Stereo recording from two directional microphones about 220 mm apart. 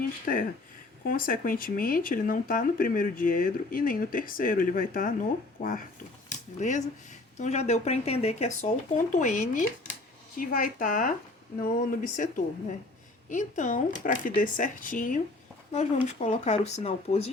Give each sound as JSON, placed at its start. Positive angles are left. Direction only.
{"t": 0.3, "sound": "speech", "side_deg": 40}
{"t": 13.3, "sound": "speech", "side_deg": 35}